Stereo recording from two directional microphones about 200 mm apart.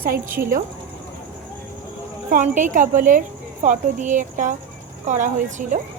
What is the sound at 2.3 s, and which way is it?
Speech, 40° right (ahead or behind).